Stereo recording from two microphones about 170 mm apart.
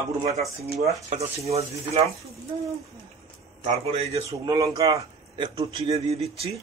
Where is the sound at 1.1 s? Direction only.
40° right (ahead or behind).